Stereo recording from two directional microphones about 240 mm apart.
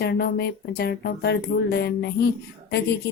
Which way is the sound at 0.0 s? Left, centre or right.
Left.